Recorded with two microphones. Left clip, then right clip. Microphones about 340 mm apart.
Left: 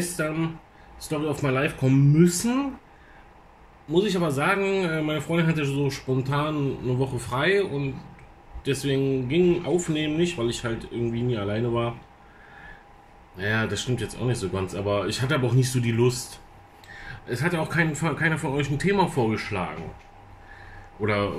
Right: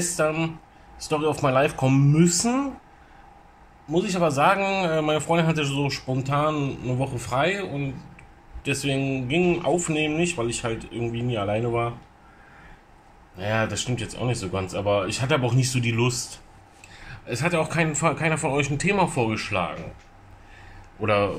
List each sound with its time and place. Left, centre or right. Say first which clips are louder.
0.0 s speech: right 4 dB; centre
4.0 s speech: right 4 dB; centre
9.3 s speech: right 2 dB; centre
13.4 s speech: right 1 dB; centre
17.3 s speech: right 3 dB; centre